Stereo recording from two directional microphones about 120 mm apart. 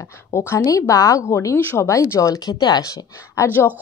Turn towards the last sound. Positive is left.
turn(degrees=30)  # may be behind; listen again after turning